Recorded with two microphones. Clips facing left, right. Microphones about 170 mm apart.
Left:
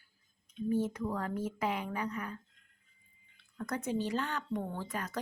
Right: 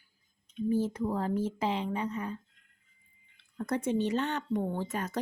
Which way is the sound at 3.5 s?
30° right (ahead or behind).